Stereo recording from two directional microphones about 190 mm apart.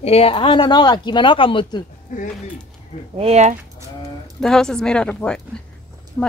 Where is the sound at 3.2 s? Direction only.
35° right (ahead or behind).